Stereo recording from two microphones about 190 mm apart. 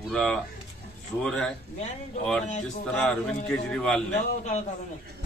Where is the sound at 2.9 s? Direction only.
5° left (ahead or behind).